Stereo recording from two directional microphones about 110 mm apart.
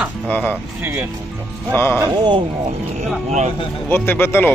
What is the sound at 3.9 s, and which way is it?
Speech, 20° left (ahead or behind).